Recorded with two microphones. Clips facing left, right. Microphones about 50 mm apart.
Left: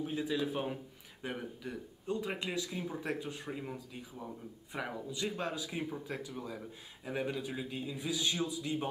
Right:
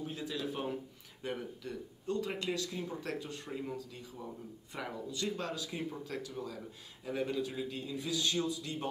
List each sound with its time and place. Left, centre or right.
0.0 s speech: centre